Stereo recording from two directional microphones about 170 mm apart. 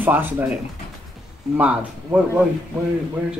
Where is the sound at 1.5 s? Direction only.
10° right (ahead or behind).